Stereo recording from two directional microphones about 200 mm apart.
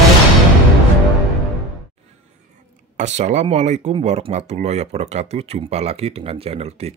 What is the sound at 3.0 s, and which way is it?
Speech, 35° right (ahead or behind).